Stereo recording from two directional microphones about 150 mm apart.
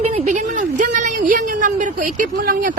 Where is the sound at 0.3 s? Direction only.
55° right (ahead or behind).